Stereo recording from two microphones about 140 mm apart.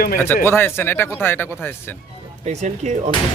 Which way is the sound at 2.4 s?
60° right (ahead or behind).